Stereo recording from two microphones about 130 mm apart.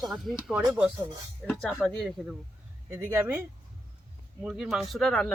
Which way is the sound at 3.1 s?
15° right (ahead or behind).